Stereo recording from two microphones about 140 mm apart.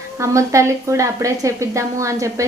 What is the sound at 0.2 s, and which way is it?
A woman's voice, 20° right (ahead or behind).